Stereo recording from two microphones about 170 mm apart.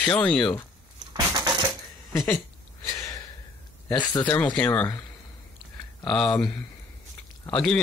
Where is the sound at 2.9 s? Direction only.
20° left (ahead or behind).